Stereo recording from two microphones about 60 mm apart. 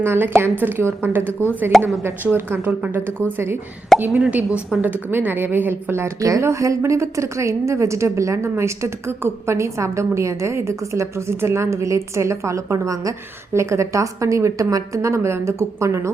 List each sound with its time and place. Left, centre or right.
0.0 s a woman's voice: right
1.3 s a woman's voice: left
1.7 s speech: centre
2.3 s a woman's voice: right
3.9 s speech: centre
4.7 s a woman's voice: right
5.1 s a woman's voice: right
6.1 s a woman's voice: right